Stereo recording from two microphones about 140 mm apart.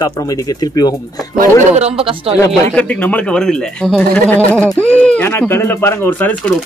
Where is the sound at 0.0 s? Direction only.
25° left (ahead or behind).